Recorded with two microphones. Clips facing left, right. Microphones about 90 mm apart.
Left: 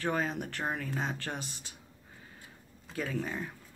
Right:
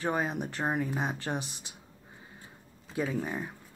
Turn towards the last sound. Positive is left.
turn(degrees=-15)  # may be behind; listen again after turning